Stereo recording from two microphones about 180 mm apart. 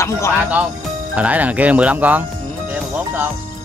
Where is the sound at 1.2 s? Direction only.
10° right (ahead or behind).